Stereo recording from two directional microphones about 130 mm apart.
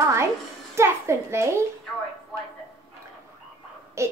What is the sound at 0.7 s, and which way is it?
Speech, 20° right (ahead or behind).